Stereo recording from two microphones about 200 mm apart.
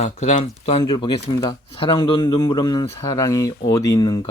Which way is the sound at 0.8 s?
25° left (ahead or behind).